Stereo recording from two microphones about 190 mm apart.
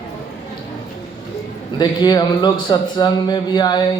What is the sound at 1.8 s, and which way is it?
A man's voice, 20° left (ahead or behind).